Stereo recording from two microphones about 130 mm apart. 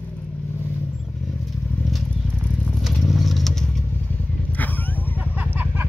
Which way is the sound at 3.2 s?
Centre (ahead or behind).